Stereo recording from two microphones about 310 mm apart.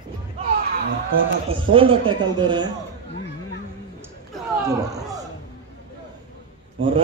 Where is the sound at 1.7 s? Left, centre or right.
Centre.